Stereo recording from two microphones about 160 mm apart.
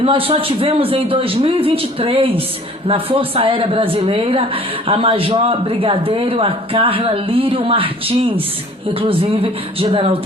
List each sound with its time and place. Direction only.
0.0 s speech: 35° right (ahead or behind)